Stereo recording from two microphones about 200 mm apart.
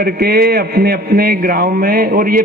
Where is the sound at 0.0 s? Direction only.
50° right (ahead or behind).